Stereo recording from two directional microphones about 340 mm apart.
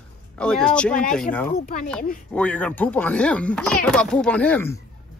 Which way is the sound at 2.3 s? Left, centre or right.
Centre.